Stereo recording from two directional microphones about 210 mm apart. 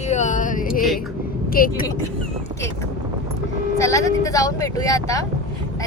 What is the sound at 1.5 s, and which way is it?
Speech, 45° left (ahead or behind).